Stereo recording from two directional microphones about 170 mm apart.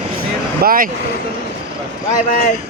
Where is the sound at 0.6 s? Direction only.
55° right (ahead or behind).